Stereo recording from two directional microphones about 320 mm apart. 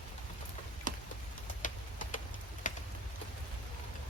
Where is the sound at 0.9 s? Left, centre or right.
Right.